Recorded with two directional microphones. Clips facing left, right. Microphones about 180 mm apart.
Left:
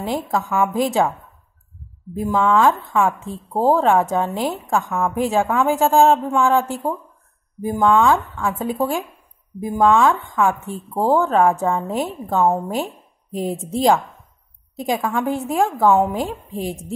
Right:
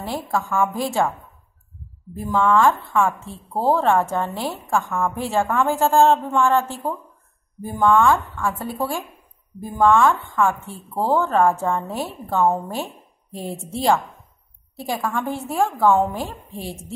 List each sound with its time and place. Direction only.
0.0 s a woman's voice: 15° left (ahead or behind)
2.1 s a woman's voice: 15° left (ahead or behind)